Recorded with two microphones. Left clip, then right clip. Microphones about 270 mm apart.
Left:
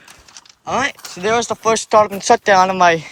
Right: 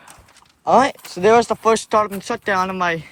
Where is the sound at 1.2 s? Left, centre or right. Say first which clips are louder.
Right 3 dB; centre.